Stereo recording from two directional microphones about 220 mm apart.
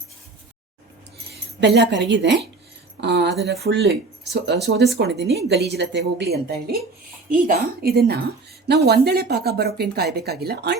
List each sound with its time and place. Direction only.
1.3 s speech: 50° right (ahead or behind)